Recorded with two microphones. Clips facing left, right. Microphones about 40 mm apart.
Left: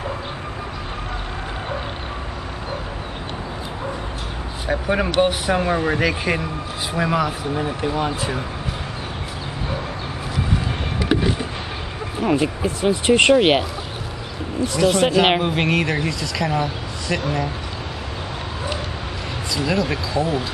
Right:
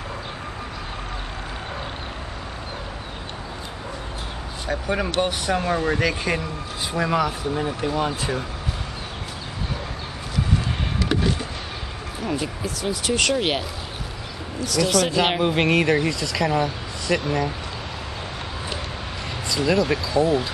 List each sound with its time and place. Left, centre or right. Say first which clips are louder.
4.6 s speech: left 4 dB; centre
11.0 s a sound: left 3 dB; centre
12.2 s speech: left 8 dB; left
15.4 s speech: right 1 dB; centre
19.5 s speech: right 1 dB; centre